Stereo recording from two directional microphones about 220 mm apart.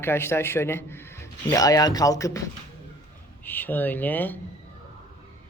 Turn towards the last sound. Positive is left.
turn(degrees=10)  # may be behind; listen again after turning